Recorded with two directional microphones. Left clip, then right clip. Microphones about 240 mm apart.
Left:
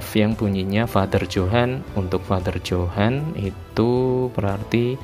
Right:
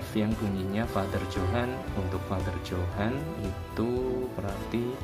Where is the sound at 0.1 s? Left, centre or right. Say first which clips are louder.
Left 10 dB; left.